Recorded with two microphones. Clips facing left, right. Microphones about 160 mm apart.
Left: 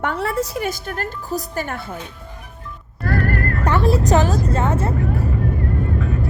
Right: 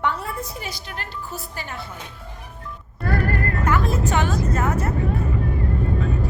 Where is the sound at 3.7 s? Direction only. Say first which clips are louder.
Left 6 dB; 30° left (ahead or behind).